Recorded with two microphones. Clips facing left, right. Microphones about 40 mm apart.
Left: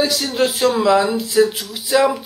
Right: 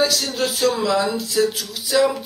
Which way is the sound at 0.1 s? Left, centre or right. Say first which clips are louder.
Left 4 dB; left.